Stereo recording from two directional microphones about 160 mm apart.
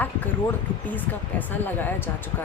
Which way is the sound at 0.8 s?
10° left (ahead or behind).